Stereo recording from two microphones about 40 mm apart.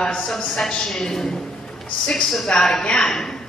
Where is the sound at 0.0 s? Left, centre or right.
Centre.